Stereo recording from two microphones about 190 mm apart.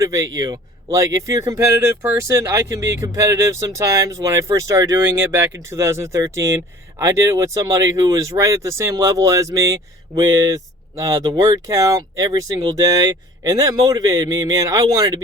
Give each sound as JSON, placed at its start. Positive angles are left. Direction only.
{"t": 0.0, "sound": "speech", "side_deg": -15}